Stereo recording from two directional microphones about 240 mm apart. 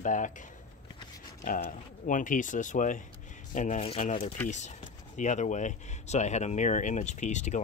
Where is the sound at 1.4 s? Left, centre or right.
Left.